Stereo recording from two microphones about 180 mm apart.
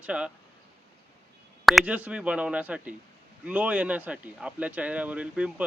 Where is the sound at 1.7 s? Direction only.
5° right (ahead or behind).